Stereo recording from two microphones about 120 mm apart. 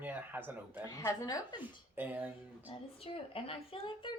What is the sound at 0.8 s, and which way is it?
Speech, 30° left (ahead or behind).